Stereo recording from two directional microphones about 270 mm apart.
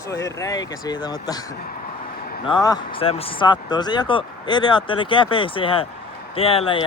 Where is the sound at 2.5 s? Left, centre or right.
Centre.